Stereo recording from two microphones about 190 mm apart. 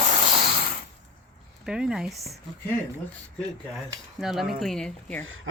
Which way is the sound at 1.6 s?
5° right (ahead or behind).